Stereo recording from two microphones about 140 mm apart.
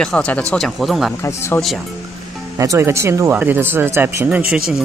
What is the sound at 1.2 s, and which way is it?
Speech, 20° left (ahead or behind).